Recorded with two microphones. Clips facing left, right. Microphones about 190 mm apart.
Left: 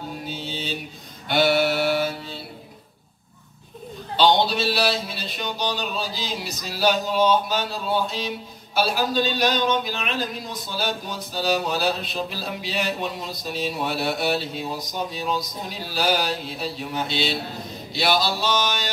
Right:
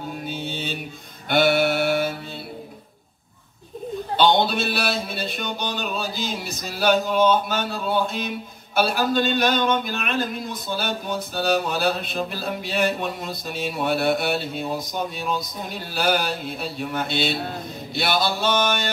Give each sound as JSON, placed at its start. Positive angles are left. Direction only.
{"t": 0.2, "sound": "mantra", "side_deg": -55}
{"t": 4.2, "sound": "speech", "side_deg": -55}